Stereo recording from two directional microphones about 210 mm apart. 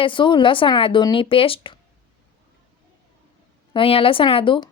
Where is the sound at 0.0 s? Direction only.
25° left (ahead or behind).